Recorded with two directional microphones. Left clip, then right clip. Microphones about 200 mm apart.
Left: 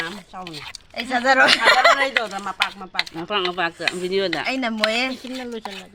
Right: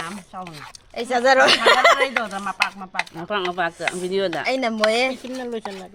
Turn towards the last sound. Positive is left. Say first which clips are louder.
# right 2 dB
turn(degrees=-45)  # may be behind; listen again after turning